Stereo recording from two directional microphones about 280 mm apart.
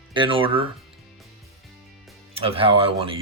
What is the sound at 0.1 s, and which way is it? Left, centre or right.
Speech, centre.